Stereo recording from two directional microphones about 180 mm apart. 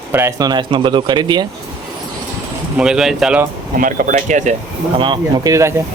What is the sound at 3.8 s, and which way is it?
Speech, 45° right (ahead or behind).